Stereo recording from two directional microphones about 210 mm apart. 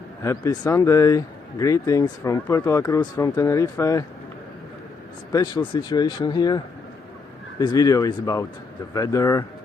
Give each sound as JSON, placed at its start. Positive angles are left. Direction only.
{"t": 0.2, "sound": "speech", "side_deg": 15}
{"t": 5.3, "sound": "speech", "side_deg": 20}
{"t": 7.6, "sound": "speech", "side_deg": 20}